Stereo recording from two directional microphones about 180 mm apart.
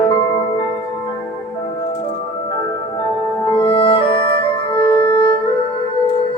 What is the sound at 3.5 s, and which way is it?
Music, 30° left (ahead or behind).